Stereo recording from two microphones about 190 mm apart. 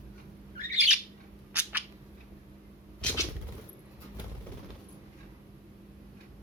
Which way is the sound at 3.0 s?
5° left (ahead or behind).